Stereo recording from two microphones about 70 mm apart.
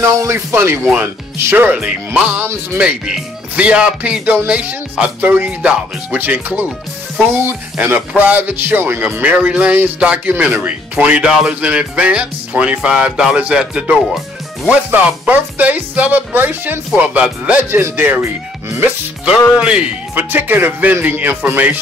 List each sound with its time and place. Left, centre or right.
0.0 s speech: right
1.8 s speech: centre
7.7 s speech: centre
9.2 s speech: centre
17.6 s speech: right
19.5 s speech: centre
20.2 s speech: right